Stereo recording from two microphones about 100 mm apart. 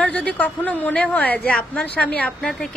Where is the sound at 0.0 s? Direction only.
15° left (ahead or behind).